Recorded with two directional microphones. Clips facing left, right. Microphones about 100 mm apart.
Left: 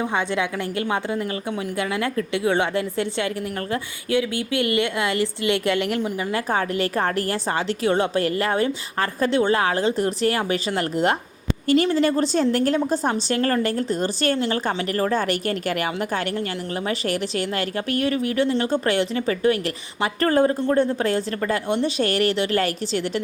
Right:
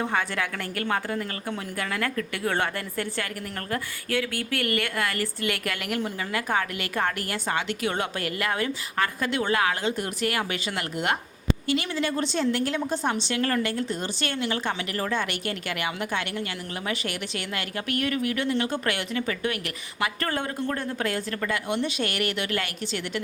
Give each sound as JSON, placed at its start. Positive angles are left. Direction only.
{"t": 0.1, "sound": "a woman's voice", "side_deg": 20}